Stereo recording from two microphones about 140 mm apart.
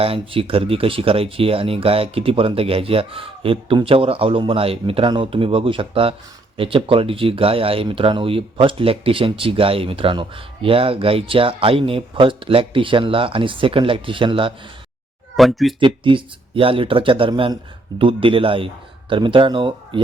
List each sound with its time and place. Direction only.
0.0 s speech: 40° right (ahead or behind)
15.4 s speech: centre (ahead or behind)
15.8 s speech: 35° right (ahead or behind)